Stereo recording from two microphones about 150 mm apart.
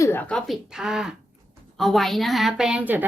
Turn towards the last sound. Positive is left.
turn(degrees=-10)  # may be behind; listen again after turning